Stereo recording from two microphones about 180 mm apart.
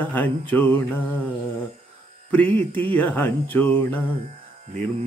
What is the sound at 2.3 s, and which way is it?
Music, 10° left (ahead or behind).